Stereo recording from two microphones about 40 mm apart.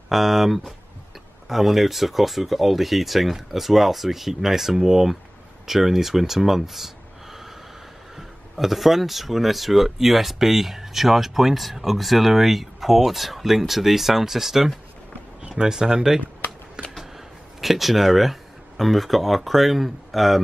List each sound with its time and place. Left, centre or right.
0.1 s speech: centre
15.6 s speech: centre
17.6 s speech: centre